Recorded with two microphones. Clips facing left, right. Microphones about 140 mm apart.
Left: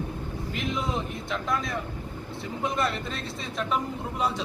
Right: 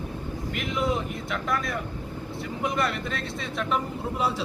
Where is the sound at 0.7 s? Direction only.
Centre (ahead or behind).